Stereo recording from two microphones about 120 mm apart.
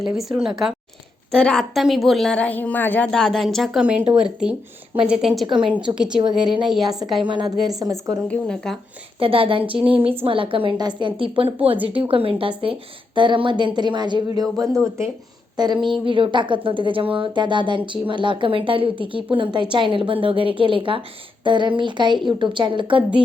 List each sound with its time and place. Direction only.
0.0 s speech: centre (ahead or behind)
1.3 s a woman's voice: 5° left (ahead or behind)
3.1 s a woman's voice: 5° left (ahead or behind)
6.4 s speech: 45° right (ahead or behind)
6.7 s speech: centre (ahead or behind)
7.2 s speech: 40° right (ahead or behind)
8.1 s speech: 5° left (ahead or behind)
9.1 s speech: 50° right (ahead or behind)
15.5 s speech: 40° right (ahead or behind)